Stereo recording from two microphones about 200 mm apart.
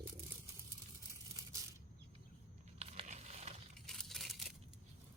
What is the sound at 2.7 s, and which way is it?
Crumpling, 30° right (ahead or behind).